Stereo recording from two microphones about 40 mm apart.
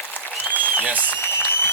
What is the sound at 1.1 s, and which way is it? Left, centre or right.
Applause, left.